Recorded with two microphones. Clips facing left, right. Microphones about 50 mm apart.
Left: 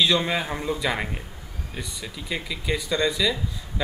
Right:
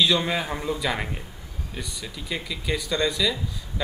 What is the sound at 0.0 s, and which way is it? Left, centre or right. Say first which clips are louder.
Speech: even; centre.